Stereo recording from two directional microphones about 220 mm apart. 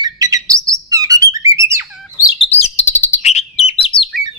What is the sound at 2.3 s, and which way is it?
Chirp, 30° left (ahead or behind).